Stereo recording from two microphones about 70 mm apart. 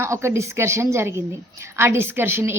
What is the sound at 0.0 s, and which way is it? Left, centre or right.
A woman's voice, right.